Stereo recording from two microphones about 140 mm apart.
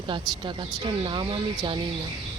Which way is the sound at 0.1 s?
35° right (ahead or behind).